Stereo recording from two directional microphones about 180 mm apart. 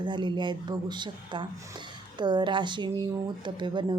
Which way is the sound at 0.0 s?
25° right (ahead or behind).